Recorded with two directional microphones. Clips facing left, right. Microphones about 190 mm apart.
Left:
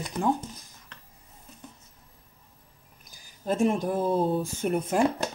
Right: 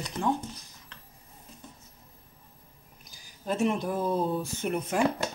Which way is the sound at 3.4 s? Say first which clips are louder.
Left 3 dB; 40° left (ahead or behind).